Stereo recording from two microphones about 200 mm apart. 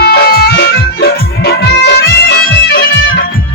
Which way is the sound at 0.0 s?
50° left (ahead or behind).